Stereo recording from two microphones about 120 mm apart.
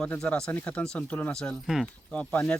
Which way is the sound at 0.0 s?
10° left (ahead or behind).